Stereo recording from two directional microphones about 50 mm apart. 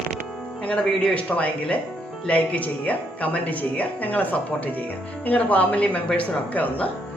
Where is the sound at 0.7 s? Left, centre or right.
Left.